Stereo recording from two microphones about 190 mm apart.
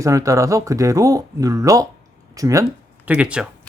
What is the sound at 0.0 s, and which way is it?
Speech, 15° right (ahead or behind).